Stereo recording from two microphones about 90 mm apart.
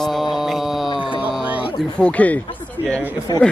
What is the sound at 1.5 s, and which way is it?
Music, 15° right (ahead or behind).